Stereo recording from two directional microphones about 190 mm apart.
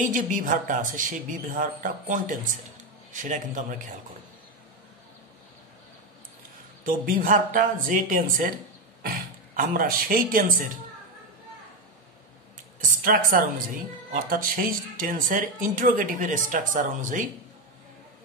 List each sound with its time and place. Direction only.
0.0 s speech: 45° right (ahead or behind)
6.8 s speech: 45° right (ahead or behind)
13.0 s speech: 50° right (ahead or behind)